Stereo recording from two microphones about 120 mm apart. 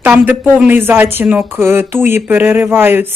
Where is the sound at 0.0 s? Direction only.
20° right (ahead or behind).